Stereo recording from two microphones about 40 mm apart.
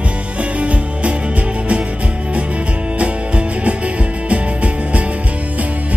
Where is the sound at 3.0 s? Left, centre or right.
Right.